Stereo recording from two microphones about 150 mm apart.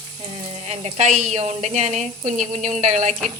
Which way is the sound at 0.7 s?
50° right (ahead or behind).